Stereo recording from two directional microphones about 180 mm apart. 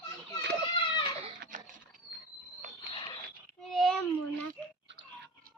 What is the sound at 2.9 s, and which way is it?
Mechanisms, 30° left (ahead or behind).